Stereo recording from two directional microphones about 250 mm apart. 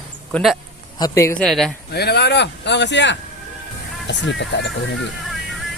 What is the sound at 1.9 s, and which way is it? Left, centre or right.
Speech, left.